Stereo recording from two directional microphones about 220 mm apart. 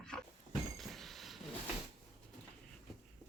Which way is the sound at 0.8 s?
Centre (ahead or behind).